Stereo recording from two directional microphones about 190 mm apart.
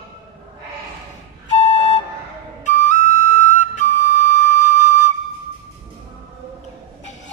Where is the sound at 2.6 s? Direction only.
40° left (ahead or behind).